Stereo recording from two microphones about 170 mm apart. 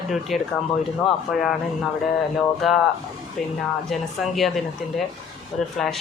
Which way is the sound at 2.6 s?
Centre (ahead or behind).